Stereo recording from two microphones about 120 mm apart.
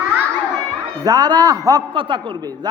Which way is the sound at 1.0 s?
30° right (ahead or behind).